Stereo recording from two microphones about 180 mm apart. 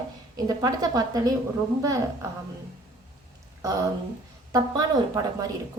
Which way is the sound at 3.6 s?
20° right (ahead or behind).